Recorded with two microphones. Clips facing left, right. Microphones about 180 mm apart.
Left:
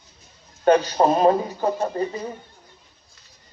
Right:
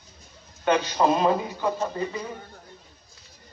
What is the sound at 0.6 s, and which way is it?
A man's voice, 40° left (ahead or behind).